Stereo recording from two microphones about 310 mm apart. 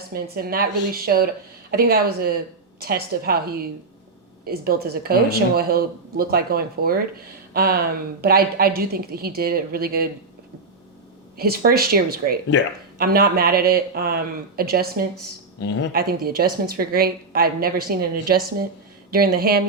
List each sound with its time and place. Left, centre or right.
0.1 s speech: right
11.3 s speech: right
15.6 s speech: left
15.9 s speech: right